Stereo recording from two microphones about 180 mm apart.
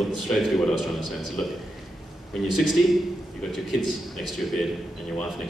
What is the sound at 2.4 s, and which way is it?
Speech, centre (ahead or behind).